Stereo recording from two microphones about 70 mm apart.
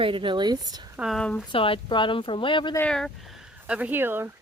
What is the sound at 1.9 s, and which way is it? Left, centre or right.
Speech, left.